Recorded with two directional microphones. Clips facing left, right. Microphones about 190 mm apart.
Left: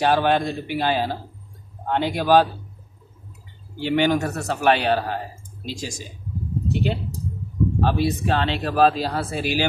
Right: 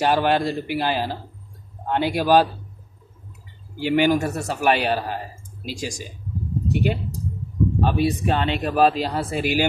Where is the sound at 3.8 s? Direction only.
5° right (ahead or behind).